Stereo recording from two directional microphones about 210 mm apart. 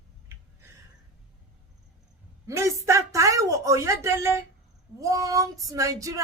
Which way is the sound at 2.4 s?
15° right (ahead or behind).